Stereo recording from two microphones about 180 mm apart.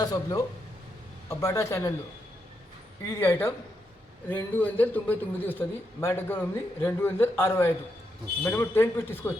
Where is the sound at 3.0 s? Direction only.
15° left (ahead or behind).